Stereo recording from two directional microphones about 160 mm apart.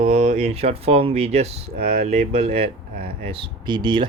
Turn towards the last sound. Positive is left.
turn(degrees=-30)  # may be behind; listen again after turning